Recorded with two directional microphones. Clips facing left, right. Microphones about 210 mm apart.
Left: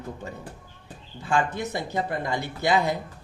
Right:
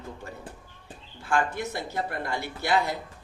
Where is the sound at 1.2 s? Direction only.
20° left (ahead or behind).